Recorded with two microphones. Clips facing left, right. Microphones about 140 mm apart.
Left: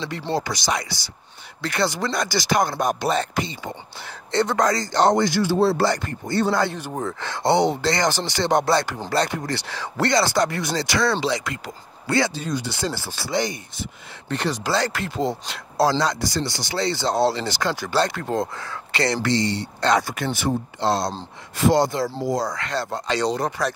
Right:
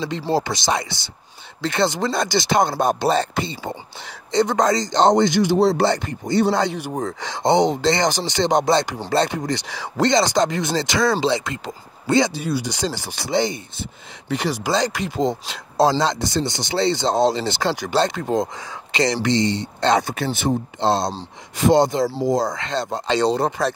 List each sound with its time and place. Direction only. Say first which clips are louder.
0.4 s speech: right 3 dB; 25° right (ahead or behind)
4.3 s speech: right 2 dB; 15° right (ahead or behind)
14.3 s speech: right 2 dB; 10° right (ahead or behind); by 23.7 s 30° right (ahead or behind)